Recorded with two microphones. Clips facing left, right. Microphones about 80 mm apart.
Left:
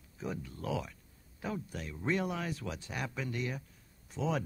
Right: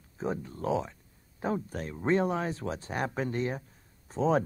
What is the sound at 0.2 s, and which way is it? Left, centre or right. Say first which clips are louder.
Speech: right 7 dB; right.